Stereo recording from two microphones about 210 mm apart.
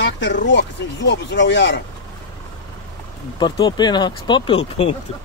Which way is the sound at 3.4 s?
20° left (ahead or behind).